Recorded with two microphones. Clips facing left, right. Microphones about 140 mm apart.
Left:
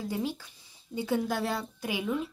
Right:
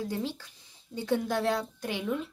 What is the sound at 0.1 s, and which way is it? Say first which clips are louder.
A woman's voice: left 1 dB; 10° left (ahead or behind).